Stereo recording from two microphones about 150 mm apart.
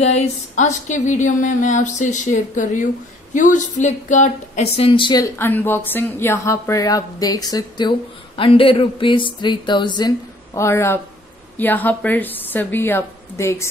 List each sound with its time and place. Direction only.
0.0 s speech: 50° left (ahead or behind)
4.7 s speech: 40° left (ahead or behind)
5.2 s a woman's voice: 15° left (ahead or behind)